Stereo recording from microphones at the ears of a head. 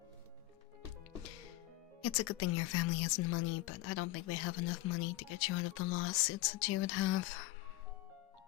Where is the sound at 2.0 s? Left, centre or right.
Left.